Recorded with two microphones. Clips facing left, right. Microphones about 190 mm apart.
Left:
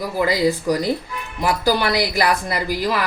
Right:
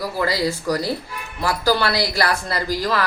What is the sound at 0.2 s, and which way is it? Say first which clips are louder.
A woman's voice: left 4 dB; 15° left (ahead or behind).